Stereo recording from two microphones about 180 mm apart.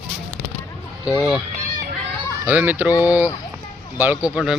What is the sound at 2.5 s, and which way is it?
Speech, 10° right (ahead or behind).